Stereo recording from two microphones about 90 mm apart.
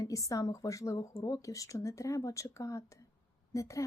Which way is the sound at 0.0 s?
40° left (ahead or behind).